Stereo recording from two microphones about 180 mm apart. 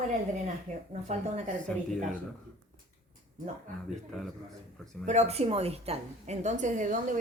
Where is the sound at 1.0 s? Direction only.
40° right (ahead or behind).